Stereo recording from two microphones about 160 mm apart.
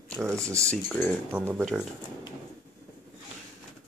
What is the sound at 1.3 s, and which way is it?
Speech, 10° right (ahead or behind).